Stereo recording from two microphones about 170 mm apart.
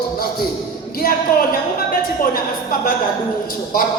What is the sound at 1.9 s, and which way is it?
Music, 55° left (ahead or behind).